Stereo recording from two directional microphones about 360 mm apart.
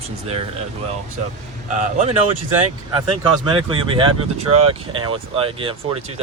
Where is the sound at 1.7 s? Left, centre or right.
Centre.